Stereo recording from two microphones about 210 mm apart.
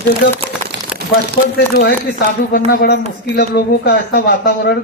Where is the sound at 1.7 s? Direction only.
50° left (ahead or behind).